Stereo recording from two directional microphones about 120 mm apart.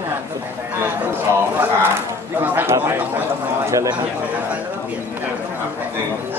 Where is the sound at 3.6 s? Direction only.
25° right (ahead or behind).